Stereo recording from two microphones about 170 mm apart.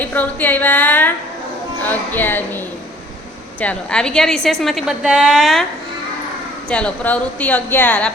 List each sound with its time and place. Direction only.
0.0 s a woman's voice: 10° left (ahead or behind)
3.6 s a woman's voice: 5° left (ahead or behind)
6.7 s a woman's voice: 5° left (ahead or behind)